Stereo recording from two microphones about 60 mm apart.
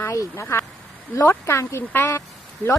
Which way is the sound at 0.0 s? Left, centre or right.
Left.